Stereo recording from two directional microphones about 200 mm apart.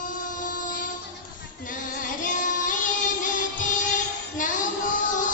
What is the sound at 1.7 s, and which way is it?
Music, 40° left (ahead or behind).